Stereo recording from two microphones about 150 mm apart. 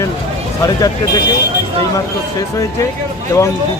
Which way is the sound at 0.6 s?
25° left (ahead or behind).